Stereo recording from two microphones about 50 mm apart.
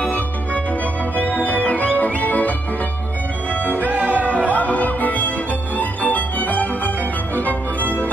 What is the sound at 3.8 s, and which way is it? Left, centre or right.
Music, right.